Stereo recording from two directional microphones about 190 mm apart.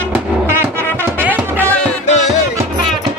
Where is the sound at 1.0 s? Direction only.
10° right (ahead or behind).